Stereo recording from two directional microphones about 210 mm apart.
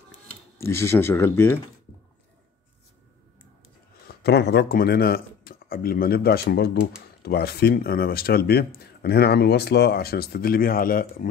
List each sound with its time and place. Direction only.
0.6 s speech: 10° left (ahead or behind)
4.1 s speech: 50° left (ahead or behind)